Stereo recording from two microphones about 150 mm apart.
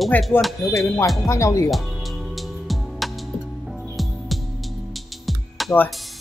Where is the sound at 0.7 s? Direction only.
20° left (ahead or behind).